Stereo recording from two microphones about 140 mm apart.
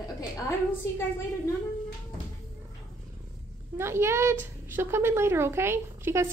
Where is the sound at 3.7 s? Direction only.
20° right (ahead or behind).